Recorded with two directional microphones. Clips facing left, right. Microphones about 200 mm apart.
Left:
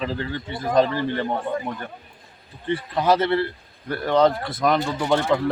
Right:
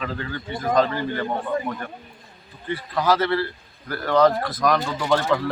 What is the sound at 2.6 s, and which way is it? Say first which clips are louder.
Speech: left 2 dB; 25° left (ahead or behind).